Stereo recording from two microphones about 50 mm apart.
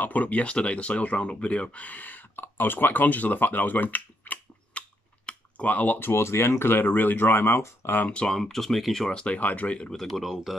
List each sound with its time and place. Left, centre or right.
0.0 s speech: left
5.2 s typing: left
5.9 s speech: left
8.3 s speech: centre
9.2 s speech: left
9.9 s speech: centre